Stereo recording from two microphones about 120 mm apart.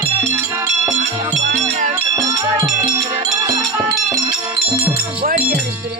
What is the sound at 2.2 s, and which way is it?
Music, 30° right (ahead or behind).